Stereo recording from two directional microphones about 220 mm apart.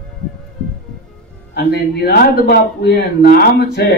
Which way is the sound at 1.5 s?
45° left (ahead or behind).